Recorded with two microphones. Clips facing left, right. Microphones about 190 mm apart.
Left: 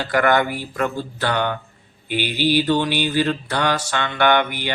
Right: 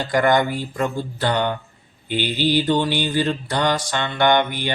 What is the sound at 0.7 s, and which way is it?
Speech, 15° right (ahead or behind).